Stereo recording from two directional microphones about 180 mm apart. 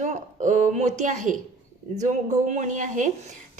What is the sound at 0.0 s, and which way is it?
A woman's voice, 45° right (ahead or behind).